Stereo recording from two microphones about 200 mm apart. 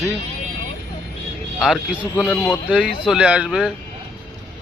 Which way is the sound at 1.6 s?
Centre (ahead or behind).